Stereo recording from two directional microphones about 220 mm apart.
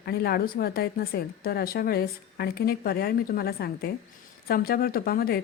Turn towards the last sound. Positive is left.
turn(degrees=45)  # may be behind; listen again after turning